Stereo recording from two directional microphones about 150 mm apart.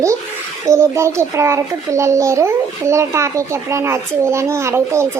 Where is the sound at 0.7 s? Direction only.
20° right (ahead or behind).